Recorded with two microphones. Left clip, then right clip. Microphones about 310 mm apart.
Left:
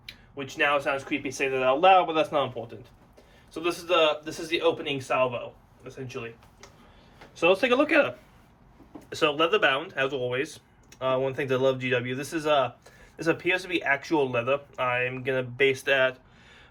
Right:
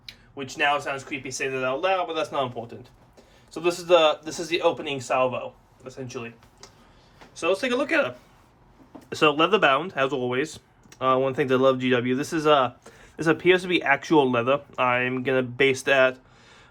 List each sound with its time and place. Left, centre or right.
0.0 s a man's voice: centre
7.3 s speech: centre
9.0 s a man's voice: right